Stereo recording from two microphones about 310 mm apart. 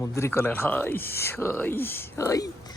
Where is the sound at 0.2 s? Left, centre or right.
Centre.